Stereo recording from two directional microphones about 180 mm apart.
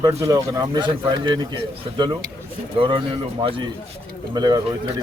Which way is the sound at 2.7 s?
30° right (ahead or behind).